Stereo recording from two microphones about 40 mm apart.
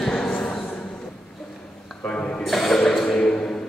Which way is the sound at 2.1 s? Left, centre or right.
Left.